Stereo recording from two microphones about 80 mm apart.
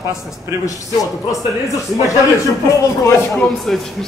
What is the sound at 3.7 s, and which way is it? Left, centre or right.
Speech, centre.